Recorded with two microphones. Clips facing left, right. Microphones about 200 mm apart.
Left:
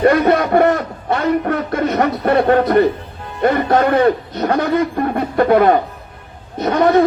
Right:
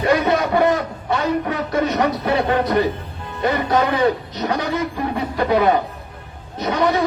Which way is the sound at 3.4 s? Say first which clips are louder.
Left 4 dB; 55° left (ahead or behind).